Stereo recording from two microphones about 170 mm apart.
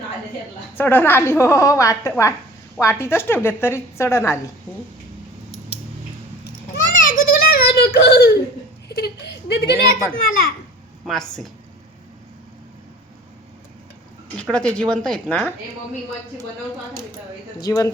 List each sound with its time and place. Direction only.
0.8 s a woman's voice: 10° left (ahead or behind)
6.9 s a sound: 55° left (ahead or behind); by 8.4 s 70° left (ahead or behind)
9.0 s a woman's voice: 75° left (ahead or behind)
11.0 s a woman's voice: centre (ahead or behind)
14.3 s a woman's voice: 5° left (ahead or behind)
17.6 s speech: 20° left (ahead or behind)